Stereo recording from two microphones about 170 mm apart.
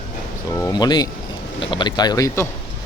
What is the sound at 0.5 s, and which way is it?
Speech, 20° left (ahead or behind).